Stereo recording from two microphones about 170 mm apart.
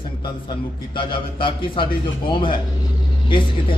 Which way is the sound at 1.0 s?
30° left (ahead or behind).